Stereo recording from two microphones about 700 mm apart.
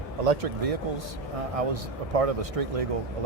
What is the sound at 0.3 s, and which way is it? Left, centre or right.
A man's voice, right.